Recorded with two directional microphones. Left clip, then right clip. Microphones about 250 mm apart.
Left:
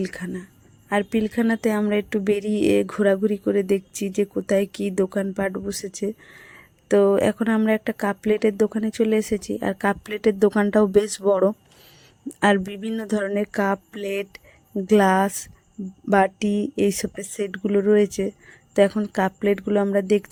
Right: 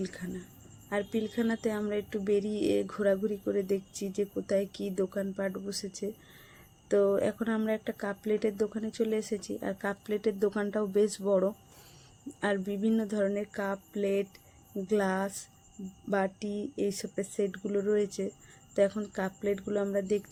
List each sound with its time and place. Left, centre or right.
0.0 s speech: left